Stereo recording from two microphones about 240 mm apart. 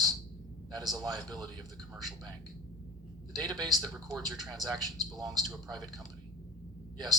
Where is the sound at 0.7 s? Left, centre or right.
Centre.